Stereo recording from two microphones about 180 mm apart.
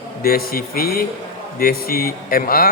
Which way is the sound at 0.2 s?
55° left (ahead or behind).